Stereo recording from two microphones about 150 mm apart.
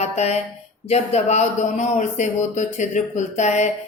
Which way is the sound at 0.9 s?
45° left (ahead or behind).